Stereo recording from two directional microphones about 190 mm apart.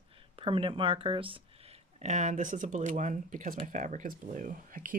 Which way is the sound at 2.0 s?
40° right (ahead or behind).